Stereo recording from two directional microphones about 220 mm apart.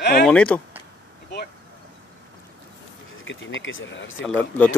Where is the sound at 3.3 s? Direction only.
60° left (ahead or behind).